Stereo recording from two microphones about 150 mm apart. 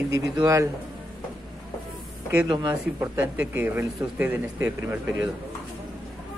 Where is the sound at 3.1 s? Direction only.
10° right (ahead or behind).